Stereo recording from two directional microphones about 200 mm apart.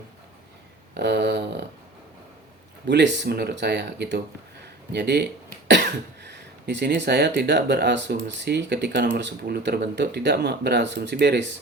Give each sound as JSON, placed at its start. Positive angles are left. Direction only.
{"t": 0.9, "sound": "speech", "side_deg": -55}
{"t": 2.8, "sound": "speech", "side_deg": -60}